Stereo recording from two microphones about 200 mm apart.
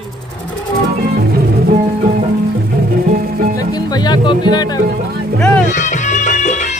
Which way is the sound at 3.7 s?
20° left (ahead or behind).